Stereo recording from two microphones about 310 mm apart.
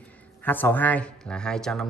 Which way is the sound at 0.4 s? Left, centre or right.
Centre.